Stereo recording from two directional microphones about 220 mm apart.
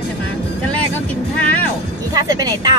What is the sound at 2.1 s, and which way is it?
Speech, 15° right (ahead or behind).